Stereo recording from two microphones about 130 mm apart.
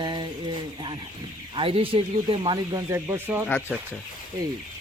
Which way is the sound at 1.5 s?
45° right (ahead or behind).